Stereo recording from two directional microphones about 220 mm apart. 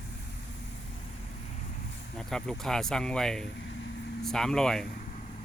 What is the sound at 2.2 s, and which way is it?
Speech, centre (ahead or behind).